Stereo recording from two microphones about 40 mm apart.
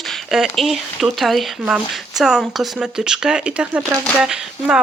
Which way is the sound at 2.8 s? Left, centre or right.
Centre.